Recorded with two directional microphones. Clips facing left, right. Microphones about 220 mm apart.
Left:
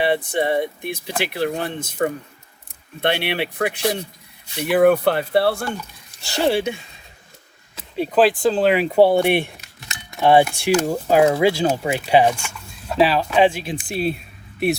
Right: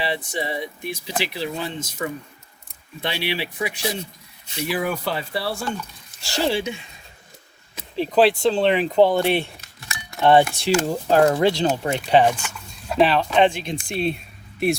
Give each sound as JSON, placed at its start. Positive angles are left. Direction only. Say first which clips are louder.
{"t": 0.0, "sound": "speech", "louder": "left 7 dB", "side_deg": 55}
{"t": 8.1, "sound": "speech", "louder": "left 1 dB", "side_deg": 0}